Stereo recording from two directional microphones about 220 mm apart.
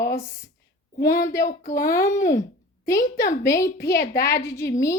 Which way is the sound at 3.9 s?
40° left (ahead or behind).